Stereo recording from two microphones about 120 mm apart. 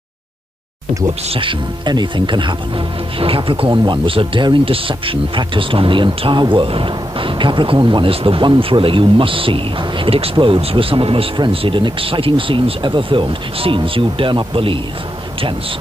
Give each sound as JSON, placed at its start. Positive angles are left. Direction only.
{"t": 1.3, "sound": "speech", "side_deg": -40}